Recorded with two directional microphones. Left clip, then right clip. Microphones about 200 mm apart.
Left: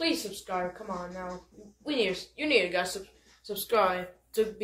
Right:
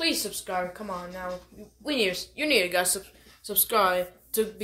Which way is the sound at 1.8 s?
65° right (ahead or behind).